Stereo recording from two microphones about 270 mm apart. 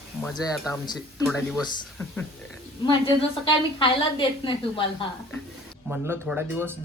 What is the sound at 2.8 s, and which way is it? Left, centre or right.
A woman's voice, centre.